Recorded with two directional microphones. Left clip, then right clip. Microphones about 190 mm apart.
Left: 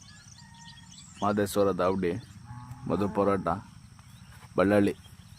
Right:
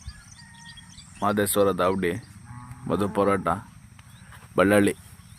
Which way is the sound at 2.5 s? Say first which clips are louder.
Right 3 dB; 20° right (ahead or behind).